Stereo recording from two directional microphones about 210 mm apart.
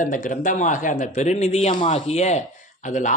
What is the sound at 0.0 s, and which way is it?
A man's voice, 40° left (ahead or behind).